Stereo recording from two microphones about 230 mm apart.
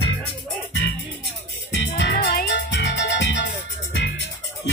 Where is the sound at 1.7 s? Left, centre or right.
Left.